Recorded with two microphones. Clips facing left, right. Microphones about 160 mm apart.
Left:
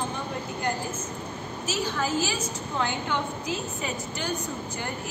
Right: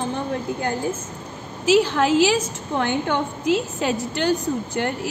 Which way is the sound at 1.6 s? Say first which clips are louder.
Right 12 dB; 85° right.